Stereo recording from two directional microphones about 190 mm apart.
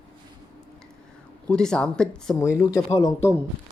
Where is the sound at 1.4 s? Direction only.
5° left (ahead or behind).